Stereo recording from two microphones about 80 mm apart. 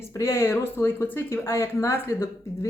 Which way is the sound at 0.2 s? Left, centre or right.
Left.